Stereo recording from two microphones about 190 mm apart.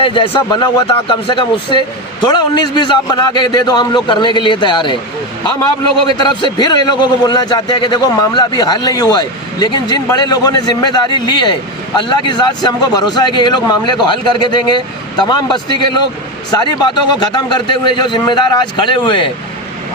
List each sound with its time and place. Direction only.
0.0 s a man's voice: 25° left (ahead or behind)
6.1 s a man's voice: 25° left (ahead or behind)